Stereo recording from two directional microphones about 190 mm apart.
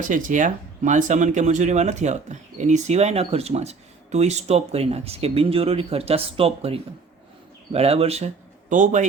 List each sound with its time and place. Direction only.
0.0 s speech: 45° right (ahead or behind)